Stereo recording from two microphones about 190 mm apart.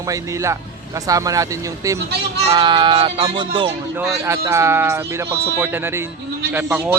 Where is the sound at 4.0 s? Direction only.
15° right (ahead or behind).